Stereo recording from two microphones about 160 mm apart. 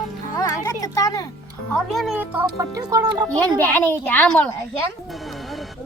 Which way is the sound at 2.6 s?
20° right (ahead or behind).